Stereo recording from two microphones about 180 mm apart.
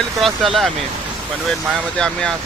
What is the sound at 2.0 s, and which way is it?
Speech, 5° left (ahead or behind).